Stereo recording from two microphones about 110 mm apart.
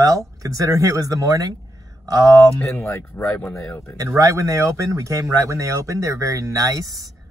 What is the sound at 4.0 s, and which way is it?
Speech, 30° right (ahead or behind).